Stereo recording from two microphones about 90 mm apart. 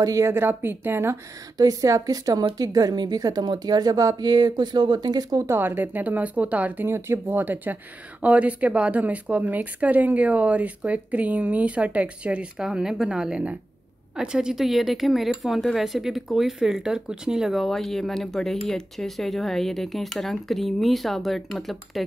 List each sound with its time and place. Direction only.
0.0 s a woman's voice: 40° right (ahead or behind)
0.3 s speech: 25° right (ahead or behind)
1.6 s a woman's voice: 40° right (ahead or behind)
5.5 s speech: 25° right (ahead or behind); by 22.0 s centre (ahead or behind)